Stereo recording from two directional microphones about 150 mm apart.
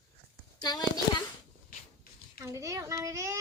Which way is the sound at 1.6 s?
75° left (ahead or behind).